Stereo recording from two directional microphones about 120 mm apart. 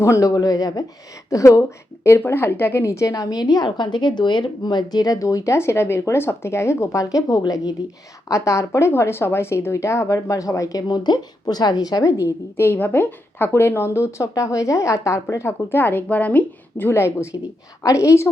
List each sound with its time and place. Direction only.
0.0 s speech: 25° left (ahead or behind)
12.5 s speech: 15° left (ahead or behind)